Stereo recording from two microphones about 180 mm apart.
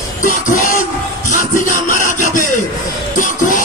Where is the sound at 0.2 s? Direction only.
50° left (ahead or behind).